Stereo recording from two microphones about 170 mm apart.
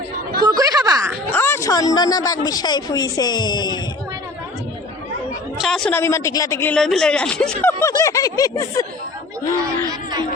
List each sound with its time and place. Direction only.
0.4 s a sound: 20° right (ahead or behind)
1.3 s speech: 15° left (ahead or behind)
5.5 s speech: centre (ahead or behind)
5.9 s a woman's voice: 15° left (ahead or behind)
6.7 s speech: 5° left (ahead or behind)
7.8 s speech: 15° left (ahead or behind)